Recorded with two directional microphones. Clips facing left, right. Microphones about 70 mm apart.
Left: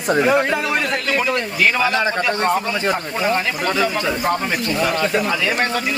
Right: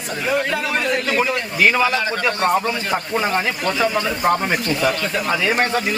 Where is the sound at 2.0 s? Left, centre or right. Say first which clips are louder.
Left 3 dB; left.